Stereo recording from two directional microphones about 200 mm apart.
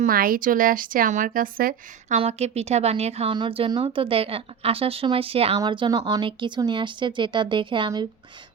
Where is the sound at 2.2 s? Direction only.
30° right (ahead or behind).